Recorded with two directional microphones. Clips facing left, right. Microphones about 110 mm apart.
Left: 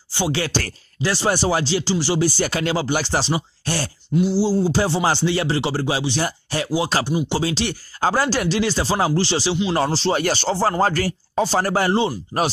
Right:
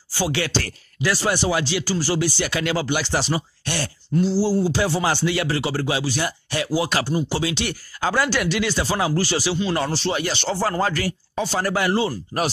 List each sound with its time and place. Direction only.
0.1 s speech: 30° left (ahead or behind)
2.2 s speech: 35° left (ahead or behind)
4.2 s speech: 15° left (ahead or behind)
4.7 s speech: 30° left (ahead or behind)
7.3 s speech: 30° left (ahead or behind)